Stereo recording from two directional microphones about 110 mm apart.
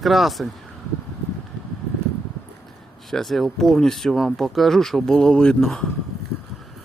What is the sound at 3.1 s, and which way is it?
Speech, centre (ahead or behind).